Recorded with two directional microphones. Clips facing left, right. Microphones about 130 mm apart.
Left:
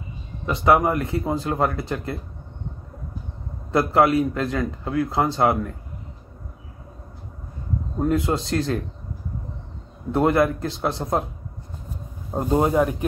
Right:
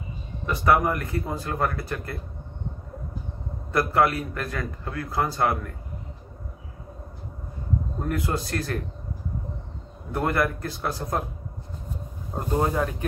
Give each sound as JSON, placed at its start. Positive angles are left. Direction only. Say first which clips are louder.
{"t": 0.5, "sound": "a man's voice", "louder": "left 3 dB", "side_deg": 20}
{"t": 3.7, "sound": "a man's voice", "louder": "left 4 dB", "side_deg": 20}
{"t": 8.1, "sound": "a man's voice", "louder": "left 5 dB", "side_deg": 25}
{"t": 10.1, "sound": "a man's voice", "louder": "left 6 dB", "side_deg": 25}
{"t": 12.4, "sound": "a man's voice", "louder": "left 5 dB", "side_deg": 20}